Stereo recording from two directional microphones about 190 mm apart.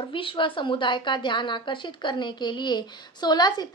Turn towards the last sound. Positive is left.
turn(degrees=20)  # may be behind; listen again after turning